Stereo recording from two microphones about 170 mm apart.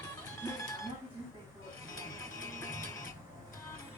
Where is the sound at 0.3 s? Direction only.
20° left (ahead or behind).